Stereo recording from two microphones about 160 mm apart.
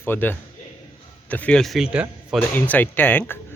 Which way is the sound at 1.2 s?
10° left (ahead or behind).